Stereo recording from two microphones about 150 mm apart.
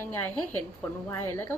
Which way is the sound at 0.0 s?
15° left (ahead or behind).